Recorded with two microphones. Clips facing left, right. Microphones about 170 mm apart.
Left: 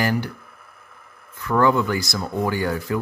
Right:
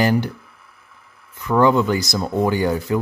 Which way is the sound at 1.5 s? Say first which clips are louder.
Right 3 dB; 20° right (ahead or behind).